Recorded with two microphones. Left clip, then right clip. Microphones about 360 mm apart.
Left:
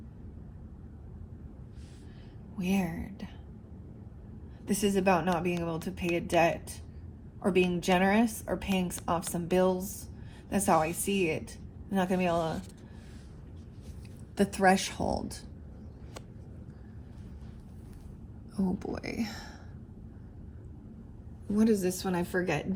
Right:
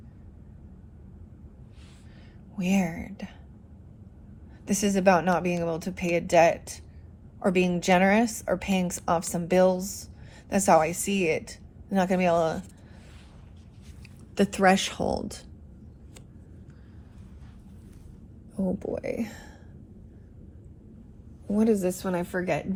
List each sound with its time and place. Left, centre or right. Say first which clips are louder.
2.6 s speech: right 5 dB; right
4.7 s speech: right 5 dB; right
14.3 s a woman's voice: right 4 dB; centre
18.5 s speech: right 5 dB; centre
21.5 s a woman's voice: right 3 dB; centre